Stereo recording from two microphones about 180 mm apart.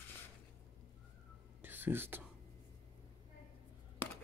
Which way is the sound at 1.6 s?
10° right (ahead or behind).